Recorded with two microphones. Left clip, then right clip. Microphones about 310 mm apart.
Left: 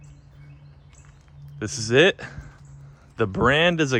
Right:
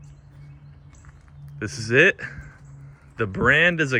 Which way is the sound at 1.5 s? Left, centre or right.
Centre.